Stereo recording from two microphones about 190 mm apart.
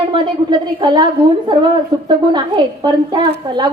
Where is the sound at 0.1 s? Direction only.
25° right (ahead or behind).